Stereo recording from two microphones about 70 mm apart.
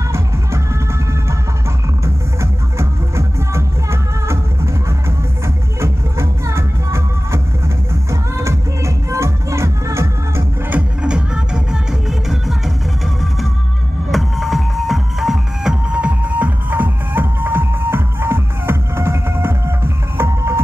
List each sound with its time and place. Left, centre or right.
2.4 s music: right
5.8 s music: right
10.7 s music: centre
14.1 s music: centre; by 20.6 s right